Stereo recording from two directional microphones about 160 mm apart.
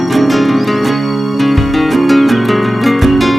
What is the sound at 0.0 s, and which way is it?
Music, centre (ahead or behind).